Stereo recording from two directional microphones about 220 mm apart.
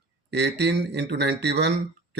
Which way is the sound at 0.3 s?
50° right (ahead or behind).